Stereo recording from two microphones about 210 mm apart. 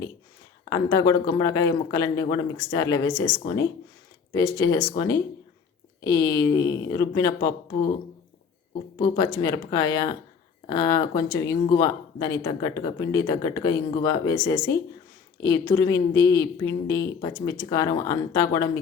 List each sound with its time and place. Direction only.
0.7 s speech: 15° left (ahead or behind)
9.1 s speech: 15° left (ahead or behind)